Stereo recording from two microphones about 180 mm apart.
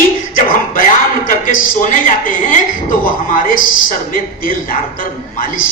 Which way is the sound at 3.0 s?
50° left (ahead or behind).